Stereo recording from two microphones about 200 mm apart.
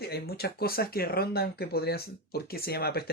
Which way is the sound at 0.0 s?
50° left (ahead or behind).